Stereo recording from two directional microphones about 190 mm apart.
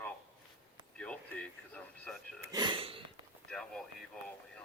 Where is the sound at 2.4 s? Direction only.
20° right (ahead or behind).